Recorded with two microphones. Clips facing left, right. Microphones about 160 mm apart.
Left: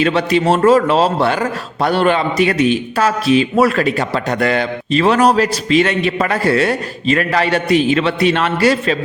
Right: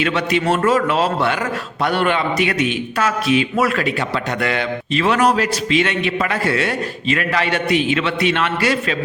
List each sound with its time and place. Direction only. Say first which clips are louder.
0.0 s a man's voice: left 4 dB; 35° left (ahead or behind)